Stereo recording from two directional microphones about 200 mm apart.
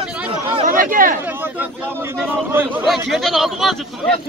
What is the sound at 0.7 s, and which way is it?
Chatter, 45° right (ahead or behind).